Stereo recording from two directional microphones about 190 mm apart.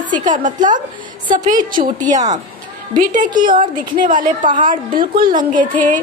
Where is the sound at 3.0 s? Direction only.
45° right (ahead or behind).